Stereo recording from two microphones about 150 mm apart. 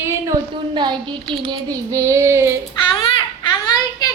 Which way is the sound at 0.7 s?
30° right (ahead or behind).